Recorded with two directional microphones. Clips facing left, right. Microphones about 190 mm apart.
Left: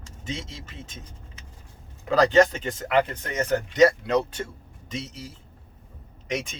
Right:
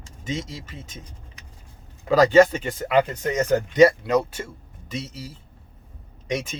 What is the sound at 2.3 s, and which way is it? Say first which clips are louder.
Speech: right 3 dB; 10° right (ahead or behind).